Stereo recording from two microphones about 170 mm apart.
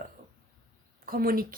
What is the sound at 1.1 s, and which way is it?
Speech, 60° right (ahead or behind).